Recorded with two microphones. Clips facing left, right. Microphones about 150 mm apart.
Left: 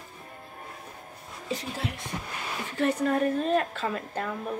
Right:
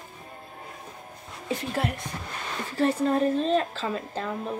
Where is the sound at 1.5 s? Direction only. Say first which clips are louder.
Right 4 dB; 55° right (ahead or behind).